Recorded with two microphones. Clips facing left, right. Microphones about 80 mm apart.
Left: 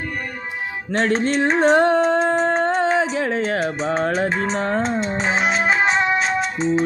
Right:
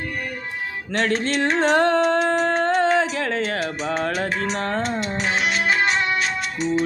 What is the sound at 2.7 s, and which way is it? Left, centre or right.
Music, centre.